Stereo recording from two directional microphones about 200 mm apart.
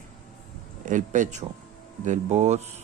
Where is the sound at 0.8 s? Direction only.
40° right (ahead or behind).